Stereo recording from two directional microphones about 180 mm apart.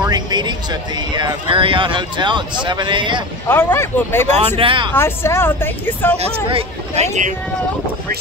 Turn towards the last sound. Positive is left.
turn(degrees=-40)  # may be behind; listen again after turning